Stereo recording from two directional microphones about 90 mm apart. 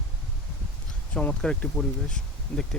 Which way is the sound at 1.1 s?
10° left (ahead or behind).